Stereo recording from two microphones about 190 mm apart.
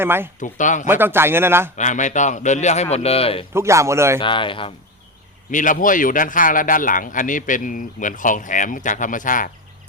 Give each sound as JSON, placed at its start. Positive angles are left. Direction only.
{"t": 0.0, "sound": "a man's voice", "side_deg": -10}
{"t": 0.3, "sound": "a man's voice", "side_deg": 40}
{"t": 0.9, "sound": "a man's voice", "side_deg": -10}
{"t": 1.7, "sound": "a man's voice", "side_deg": 40}
{"t": 3.5, "sound": "a man's voice", "side_deg": -15}
{"t": 4.2, "sound": "a man's voice", "side_deg": 25}
{"t": 5.5, "sound": "speech", "side_deg": 45}